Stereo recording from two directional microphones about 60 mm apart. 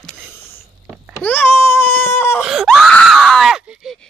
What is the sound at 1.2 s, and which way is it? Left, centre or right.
Baby cry, left.